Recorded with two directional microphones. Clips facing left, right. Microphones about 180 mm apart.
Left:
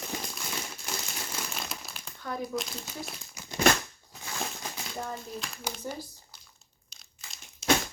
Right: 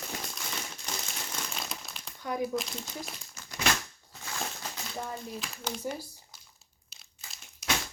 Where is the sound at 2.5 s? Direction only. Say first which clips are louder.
Right 1 dB; 5° left (ahead or behind).